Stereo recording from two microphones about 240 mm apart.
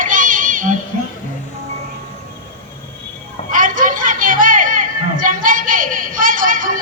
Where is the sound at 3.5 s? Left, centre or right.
Right.